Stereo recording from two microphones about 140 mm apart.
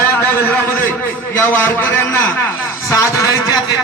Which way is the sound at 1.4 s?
15° left (ahead or behind).